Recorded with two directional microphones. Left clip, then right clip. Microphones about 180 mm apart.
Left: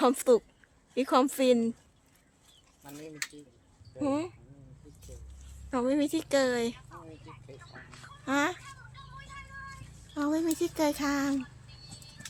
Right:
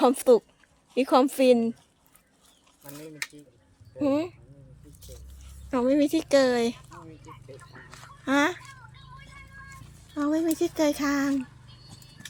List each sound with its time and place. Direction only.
0.0 s speech: 10° right (ahead or behind)
3.9 s speech: 10° right (ahead or behind)
5.7 s a woman's voice: 15° right (ahead or behind)
6.9 s a sound: 20° left (ahead or behind)
8.2 s a woman's voice: 25° right (ahead or behind)
10.2 s speech: 5° right (ahead or behind)